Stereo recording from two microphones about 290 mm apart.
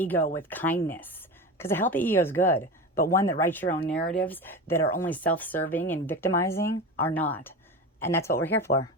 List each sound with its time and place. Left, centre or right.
0.3 s speech: centre
2.9 s speech: left
3.2 s speech: centre